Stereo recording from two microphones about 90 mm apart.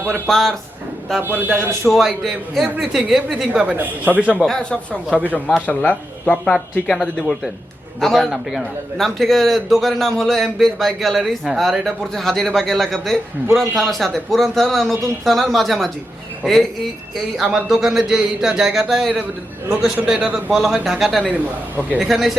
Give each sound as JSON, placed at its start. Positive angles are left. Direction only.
{"t": 0.3, "sound": "a man's voice", "side_deg": 5}
{"t": 1.2, "sound": "a man's voice", "side_deg": -20}
{"t": 1.9, "sound": "a man's voice", "side_deg": 0}
{"t": 4.4, "sound": "a man's voice", "side_deg": 10}
{"t": 17.3, "sound": "a man's voice", "side_deg": -5}
{"t": 20.5, "sound": "a man's voice", "side_deg": 0}